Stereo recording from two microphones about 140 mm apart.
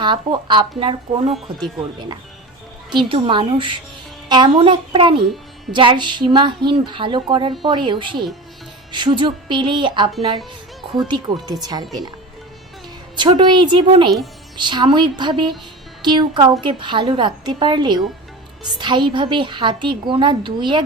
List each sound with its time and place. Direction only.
0.0 s a woman's voice: 35° right (ahead or behind)
1.3 s speech: centre (ahead or behind)
2.9 s a woman's voice: 35° right (ahead or behind)
4.5 s a woman's voice: 40° right (ahead or behind)
13.1 s a woman's voice: 30° right (ahead or behind)